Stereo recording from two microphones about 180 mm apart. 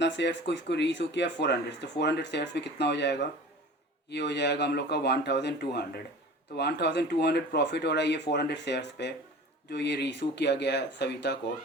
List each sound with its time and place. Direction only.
0.0 s speech: 75° left (ahead or behind)